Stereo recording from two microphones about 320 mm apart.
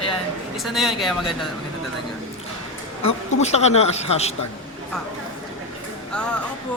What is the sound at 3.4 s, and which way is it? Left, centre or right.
Speech, centre.